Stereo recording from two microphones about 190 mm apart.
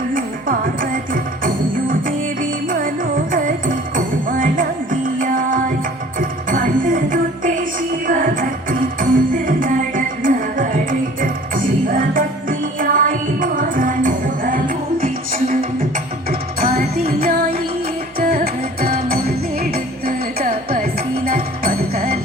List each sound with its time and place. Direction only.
0.1 s music: 45° right (ahead or behind)